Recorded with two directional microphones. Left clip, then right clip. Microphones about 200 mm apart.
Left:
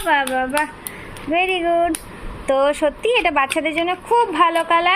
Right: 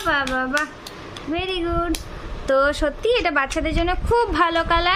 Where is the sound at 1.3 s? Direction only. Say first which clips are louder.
Left 7 dB; 45° right (ahead or behind).